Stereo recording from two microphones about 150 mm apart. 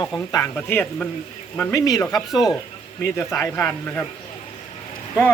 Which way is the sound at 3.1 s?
15° left (ahead or behind).